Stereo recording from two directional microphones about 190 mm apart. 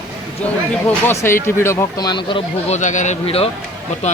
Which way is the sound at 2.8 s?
40° left (ahead or behind).